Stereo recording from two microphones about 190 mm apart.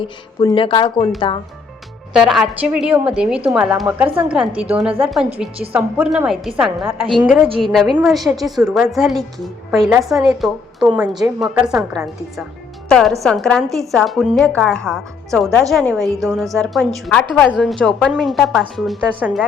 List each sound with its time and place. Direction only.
0.0 s speech: 25° left (ahead or behind)
2.1 s a woman's voice: centre (ahead or behind)